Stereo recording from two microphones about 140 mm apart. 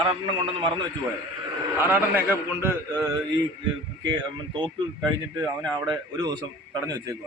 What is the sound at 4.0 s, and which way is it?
A man's voice, 30° right (ahead or behind).